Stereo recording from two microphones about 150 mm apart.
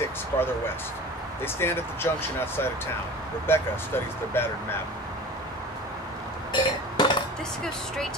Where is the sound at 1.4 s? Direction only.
15° left (ahead or behind).